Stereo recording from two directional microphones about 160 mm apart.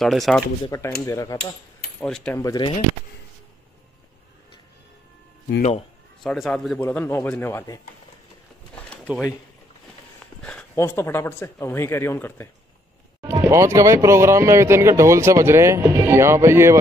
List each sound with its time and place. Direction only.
0.0 s speech: centre (ahead or behind)
0.7 s speech: 20° left (ahead or behind)
2.0 s speech: 5° left (ahead or behind)
2.3 s speech: 25° left (ahead or behind)
5.6 s a man's voice: 45° left (ahead or behind)
6.2 s speech: centre (ahead or behind); by 7.8 s 20° left (ahead or behind)
8.9 s a sound: 5° left (ahead or behind)
10.4 s a sound: 5° left (ahead or behind)
10.8 s speech: 15° left (ahead or behind)
13.2 s speech: 20° right (ahead or behind)